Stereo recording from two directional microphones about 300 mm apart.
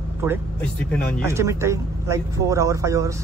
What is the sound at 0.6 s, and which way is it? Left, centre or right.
Speech, centre.